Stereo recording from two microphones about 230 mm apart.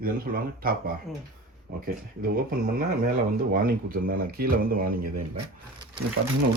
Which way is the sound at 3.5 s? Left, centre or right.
Right.